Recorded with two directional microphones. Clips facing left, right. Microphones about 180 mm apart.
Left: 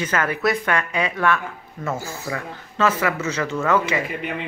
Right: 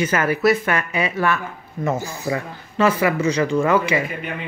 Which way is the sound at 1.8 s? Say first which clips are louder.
Right 4 dB; 20° right (ahead or behind).